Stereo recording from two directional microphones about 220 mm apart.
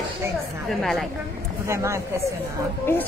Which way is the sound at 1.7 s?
10° right (ahead or behind).